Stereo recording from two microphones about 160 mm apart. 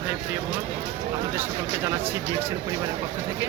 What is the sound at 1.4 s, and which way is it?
Speech, 15° right (ahead or behind).